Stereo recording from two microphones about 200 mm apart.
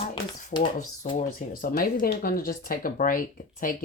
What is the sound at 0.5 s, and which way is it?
Speech, 20° left (ahead or behind).